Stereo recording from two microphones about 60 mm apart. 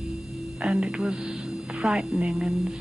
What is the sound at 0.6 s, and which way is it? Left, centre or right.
Hum, centre.